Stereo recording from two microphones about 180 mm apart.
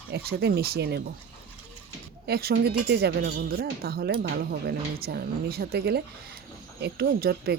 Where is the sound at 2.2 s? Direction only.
60° right (ahead or behind).